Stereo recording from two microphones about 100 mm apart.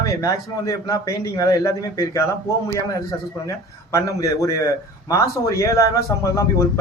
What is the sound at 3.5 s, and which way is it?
Speech, 35° left (ahead or behind).